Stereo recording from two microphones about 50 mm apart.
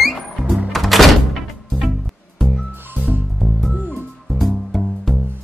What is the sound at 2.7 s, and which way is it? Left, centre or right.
Music, right.